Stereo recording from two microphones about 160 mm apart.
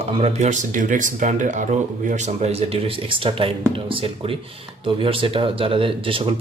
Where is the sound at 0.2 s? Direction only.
45° right (ahead or behind).